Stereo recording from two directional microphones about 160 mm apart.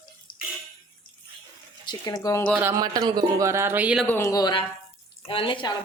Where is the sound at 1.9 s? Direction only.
25° left (ahead or behind).